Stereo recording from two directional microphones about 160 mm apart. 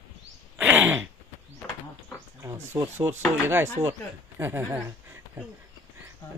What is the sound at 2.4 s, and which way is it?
Speech, 20° right (ahead or behind).